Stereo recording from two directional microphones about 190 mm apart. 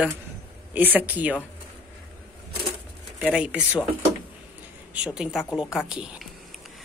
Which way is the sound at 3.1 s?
5° right (ahead or behind).